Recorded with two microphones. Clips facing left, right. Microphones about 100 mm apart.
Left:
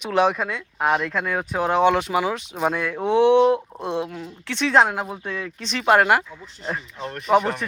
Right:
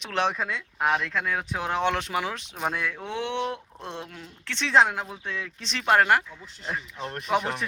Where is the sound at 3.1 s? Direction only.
15° left (ahead or behind).